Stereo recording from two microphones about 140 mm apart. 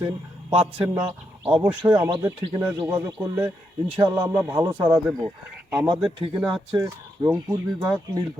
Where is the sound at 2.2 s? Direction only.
20° right (ahead or behind).